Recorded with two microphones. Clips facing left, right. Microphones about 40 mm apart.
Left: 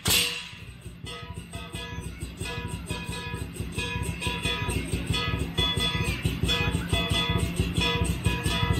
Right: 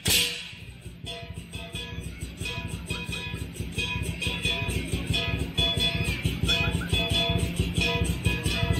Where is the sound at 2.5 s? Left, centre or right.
Centre.